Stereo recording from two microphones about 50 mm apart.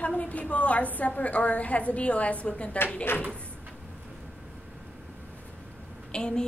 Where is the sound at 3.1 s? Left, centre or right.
Left.